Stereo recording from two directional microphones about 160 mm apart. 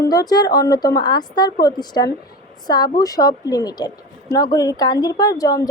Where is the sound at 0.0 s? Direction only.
25° left (ahead or behind).